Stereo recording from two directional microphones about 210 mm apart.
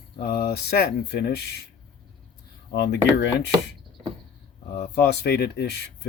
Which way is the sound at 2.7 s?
50° left (ahead or behind).